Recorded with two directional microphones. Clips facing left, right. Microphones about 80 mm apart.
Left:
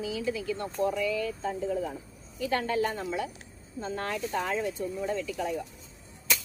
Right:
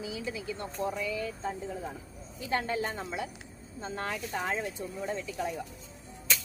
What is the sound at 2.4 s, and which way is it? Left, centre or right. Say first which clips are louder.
Speech: left 3 dB; right.